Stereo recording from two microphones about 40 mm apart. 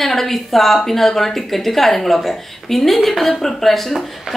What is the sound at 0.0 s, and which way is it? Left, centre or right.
A woman's voice, centre.